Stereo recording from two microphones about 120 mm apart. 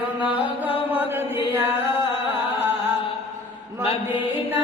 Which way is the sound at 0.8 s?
15° right (ahead or behind).